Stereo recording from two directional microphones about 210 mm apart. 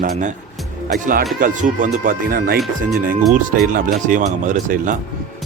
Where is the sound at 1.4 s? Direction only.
40° right (ahead or behind).